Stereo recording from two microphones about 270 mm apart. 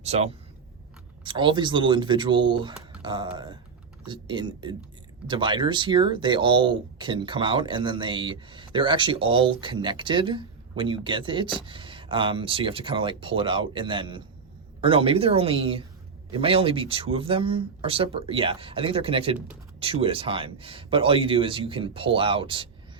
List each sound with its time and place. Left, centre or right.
0.0 s speech: right